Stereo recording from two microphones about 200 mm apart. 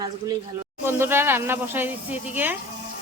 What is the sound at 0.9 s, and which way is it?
Speech, 10° right (ahead or behind).